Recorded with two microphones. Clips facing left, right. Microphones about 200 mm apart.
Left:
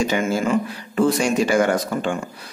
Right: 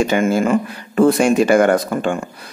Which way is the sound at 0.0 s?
55° right (ahead or behind).